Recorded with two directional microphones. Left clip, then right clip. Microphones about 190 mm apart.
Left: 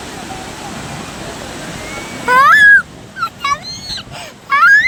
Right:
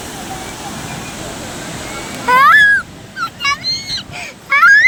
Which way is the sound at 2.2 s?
60° left (ahead or behind).